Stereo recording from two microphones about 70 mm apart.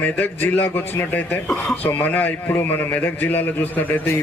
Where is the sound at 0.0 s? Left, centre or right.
Left.